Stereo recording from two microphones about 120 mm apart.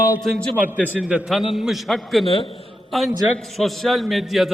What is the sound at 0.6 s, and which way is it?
A man's voice, 15° right (ahead or behind).